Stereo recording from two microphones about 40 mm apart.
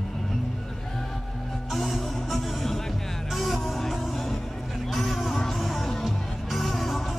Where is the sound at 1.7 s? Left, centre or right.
Centre.